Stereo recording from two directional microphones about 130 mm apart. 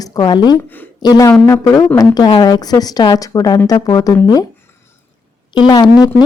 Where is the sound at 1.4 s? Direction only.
20° left (ahead or behind).